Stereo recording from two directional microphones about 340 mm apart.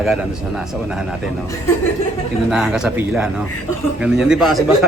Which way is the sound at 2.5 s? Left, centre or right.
Centre.